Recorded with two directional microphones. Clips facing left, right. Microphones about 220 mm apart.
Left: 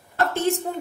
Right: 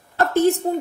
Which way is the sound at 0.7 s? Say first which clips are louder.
Right 7 dB; 35° right (ahead or behind).